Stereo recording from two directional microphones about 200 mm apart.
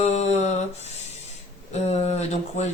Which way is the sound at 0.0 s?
35° left (ahead or behind).